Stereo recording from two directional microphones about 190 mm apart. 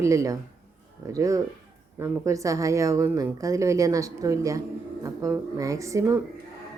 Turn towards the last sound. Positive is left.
turn(degrees=-15)  # may be behind; listen again after turning